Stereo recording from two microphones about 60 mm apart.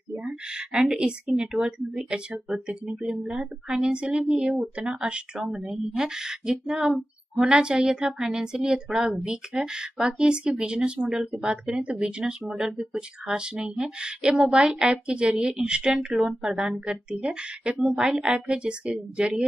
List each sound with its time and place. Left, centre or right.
0.7 s speech: centre